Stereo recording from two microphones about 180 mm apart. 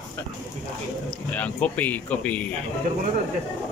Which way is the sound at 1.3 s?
5° left (ahead or behind).